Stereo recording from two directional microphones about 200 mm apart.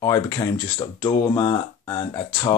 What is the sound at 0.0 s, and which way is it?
Speech, 15° left (ahead or behind).